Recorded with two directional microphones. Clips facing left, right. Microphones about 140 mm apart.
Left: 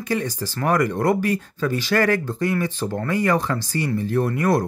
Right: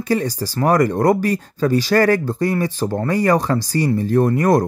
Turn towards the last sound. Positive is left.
turn(degrees=-45)  # may be behind; listen again after turning